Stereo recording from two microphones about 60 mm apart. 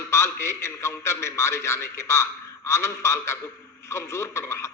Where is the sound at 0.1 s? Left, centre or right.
Left.